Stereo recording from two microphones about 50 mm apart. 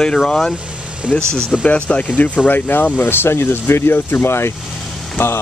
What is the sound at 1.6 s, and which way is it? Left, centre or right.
Speech, left.